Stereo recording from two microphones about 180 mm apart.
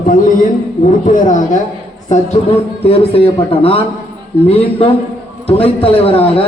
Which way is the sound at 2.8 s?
30° left (ahead or behind).